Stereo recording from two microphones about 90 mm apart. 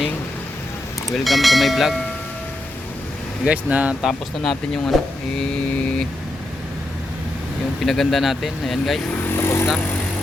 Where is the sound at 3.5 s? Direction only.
15° right (ahead or behind).